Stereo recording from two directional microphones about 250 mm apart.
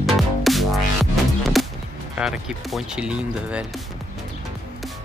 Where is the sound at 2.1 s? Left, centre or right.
Centre.